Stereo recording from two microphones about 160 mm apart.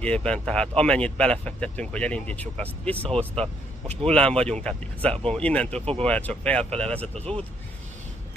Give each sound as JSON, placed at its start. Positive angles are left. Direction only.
{"t": 0.0, "sound": "speech", "side_deg": 5}
{"t": 3.0, "sound": "speech", "side_deg": -35}
{"t": 4.1, "sound": "speech", "side_deg": 5}